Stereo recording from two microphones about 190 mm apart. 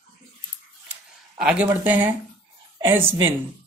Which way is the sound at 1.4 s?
5° right (ahead or behind).